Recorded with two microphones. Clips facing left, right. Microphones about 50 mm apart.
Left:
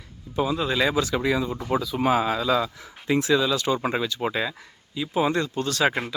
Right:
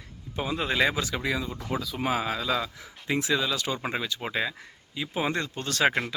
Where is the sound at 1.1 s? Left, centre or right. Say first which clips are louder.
Left 6 dB; centre.